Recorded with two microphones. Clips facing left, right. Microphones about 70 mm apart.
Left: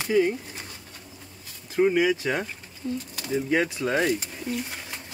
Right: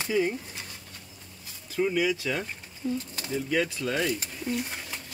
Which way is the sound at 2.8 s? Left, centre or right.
Centre.